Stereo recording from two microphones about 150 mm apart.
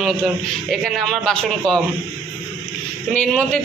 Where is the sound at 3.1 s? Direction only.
5° left (ahead or behind).